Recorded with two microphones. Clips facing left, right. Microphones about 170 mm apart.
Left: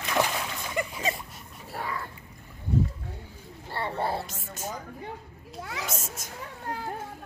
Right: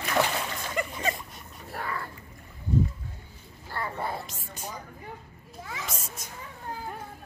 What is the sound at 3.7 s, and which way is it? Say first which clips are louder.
Speech: left 3 dB; 30° left (ahead or behind).